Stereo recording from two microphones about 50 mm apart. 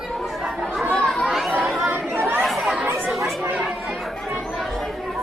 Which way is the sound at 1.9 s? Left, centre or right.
Right.